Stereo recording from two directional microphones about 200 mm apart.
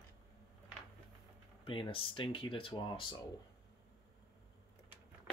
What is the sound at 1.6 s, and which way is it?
Speech, 25° left (ahead or behind).